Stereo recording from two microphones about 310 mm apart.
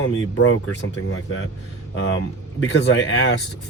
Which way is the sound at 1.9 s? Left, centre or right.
Left.